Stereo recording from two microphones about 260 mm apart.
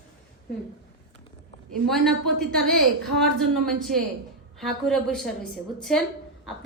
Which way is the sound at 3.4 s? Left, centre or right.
Centre.